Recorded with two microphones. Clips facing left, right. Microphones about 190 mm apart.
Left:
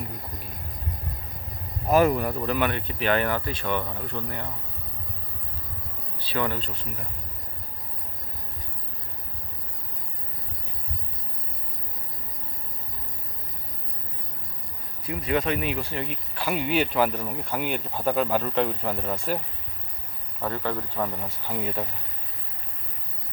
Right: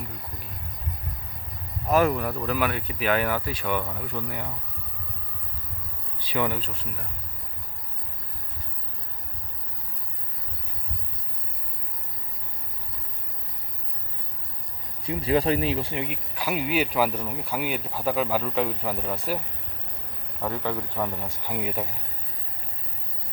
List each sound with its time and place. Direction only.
1.9 s speech: centre (ahead or behind)
6.1 s speech: 15° right (ahead or behind)
15.0 s speech: 30° right (ahead or behind)
16.0 s speech: 10° right (ahead or behind)
20.5 s speech: 15° right (ahead or behind)